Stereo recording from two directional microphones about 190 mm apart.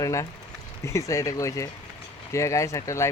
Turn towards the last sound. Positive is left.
turn(degrees=15)  # may be behind; listen again after turning